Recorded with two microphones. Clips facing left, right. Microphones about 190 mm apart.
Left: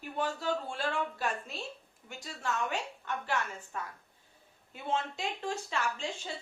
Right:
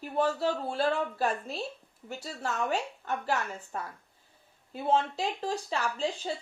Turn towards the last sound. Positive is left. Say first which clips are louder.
# right 4 dB
turn(degrees=-35)  # may be behind; listen again after turning